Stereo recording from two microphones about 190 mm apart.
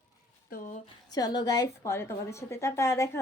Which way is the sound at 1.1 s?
20° left (ahead or behind).